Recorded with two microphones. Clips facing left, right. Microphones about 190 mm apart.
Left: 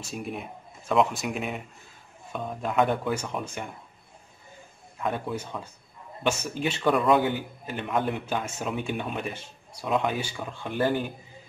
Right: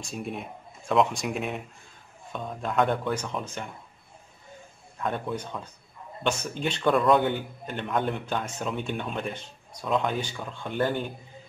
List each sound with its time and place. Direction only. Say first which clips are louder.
0.0 s speech: even; 5° left (ahead or behind)
2.6 s a man's voice: even; 5° left (ahead or behind)
5.0 s a man's voice: even; 5° left (ahead or behind)